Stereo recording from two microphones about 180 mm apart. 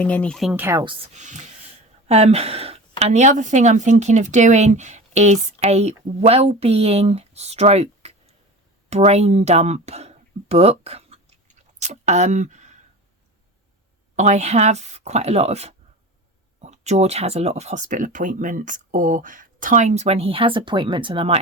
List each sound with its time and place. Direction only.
0.0 s speech: 5° left (ahead or behind)
0.5 s speech: 15° right (ahead or behind)
1.1 s speech: 40° right (ahead or behind)
11.8 s a sound: 40° right (ahead or behind)
14.2 s speech: 40° right (ahead or behind)